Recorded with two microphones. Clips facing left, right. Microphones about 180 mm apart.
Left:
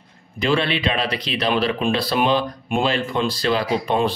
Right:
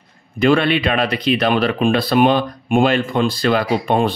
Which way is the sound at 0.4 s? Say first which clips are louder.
Right 6 dB; 55° right (ahead or behind).